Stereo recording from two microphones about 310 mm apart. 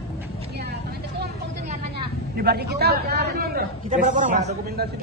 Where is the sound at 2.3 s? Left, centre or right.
Right.